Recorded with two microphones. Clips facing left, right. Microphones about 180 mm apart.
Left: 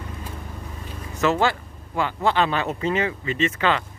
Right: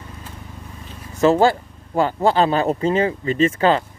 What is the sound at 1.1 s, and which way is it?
Speech, 30° right (ahead or behind).